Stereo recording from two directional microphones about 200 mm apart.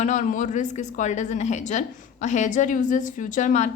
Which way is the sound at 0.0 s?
40° left (ahead or behind).